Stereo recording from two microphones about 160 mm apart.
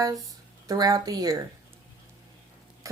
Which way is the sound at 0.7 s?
25° right (ahead or behind).